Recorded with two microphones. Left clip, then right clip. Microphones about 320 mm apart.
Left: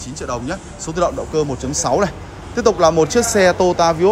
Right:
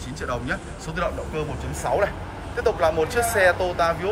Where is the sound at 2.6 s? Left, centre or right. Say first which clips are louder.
Left 8 dB; centre.